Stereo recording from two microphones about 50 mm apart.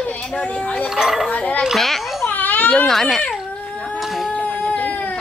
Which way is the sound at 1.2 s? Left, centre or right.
Left.